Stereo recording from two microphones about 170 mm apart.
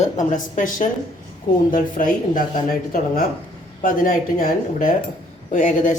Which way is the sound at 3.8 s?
55° left (ahead or behind).